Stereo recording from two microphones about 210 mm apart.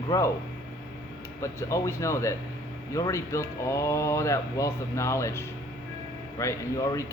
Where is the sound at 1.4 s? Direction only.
15° left (ahead or behind).